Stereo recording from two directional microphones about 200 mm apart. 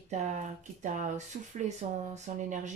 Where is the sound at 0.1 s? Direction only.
35° right (ahead or behind).